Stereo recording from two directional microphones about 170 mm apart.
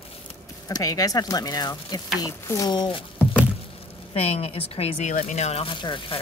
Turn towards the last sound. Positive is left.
turn(degrees=30)  # may be behind; listen again after turning